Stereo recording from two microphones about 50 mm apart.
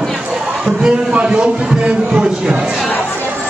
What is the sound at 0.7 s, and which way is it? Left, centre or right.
A man's voice, centre.